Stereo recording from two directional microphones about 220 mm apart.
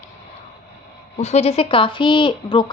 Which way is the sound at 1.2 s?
30° left (ahead or behind).